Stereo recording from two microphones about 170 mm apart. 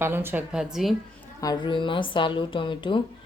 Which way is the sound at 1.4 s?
25° left (ahead or behind).